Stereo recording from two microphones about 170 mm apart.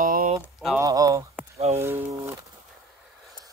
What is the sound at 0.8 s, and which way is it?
Speech, 20° right (ahead or behind).